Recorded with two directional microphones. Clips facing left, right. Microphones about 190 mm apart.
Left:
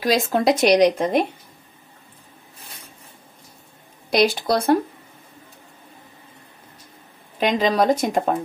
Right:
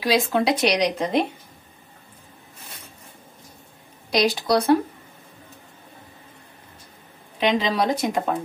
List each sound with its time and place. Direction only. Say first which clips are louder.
0.0 s speech: left 2 dB; 45° left (ahead or behind)
4.1 s speech: left 1 dB; 50° left (ahead or behind)
7.3 s speech: left 2 dB; 45° left (ahead or behind)